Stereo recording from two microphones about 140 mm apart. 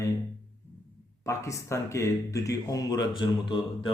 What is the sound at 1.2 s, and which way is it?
Speech, 20° left (ahead or behind).